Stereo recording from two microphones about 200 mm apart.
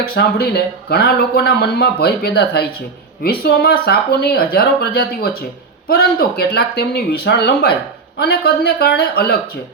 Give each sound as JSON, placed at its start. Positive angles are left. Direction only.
{"t": 0.0, "sound": "speech", "side_deg": 50}